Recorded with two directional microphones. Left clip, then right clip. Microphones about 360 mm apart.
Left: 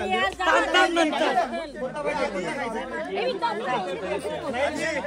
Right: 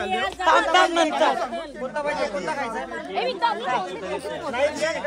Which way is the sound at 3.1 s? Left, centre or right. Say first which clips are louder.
Right 4 dB; centre.